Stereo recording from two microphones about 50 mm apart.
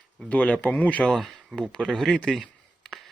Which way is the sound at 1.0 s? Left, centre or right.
Centre.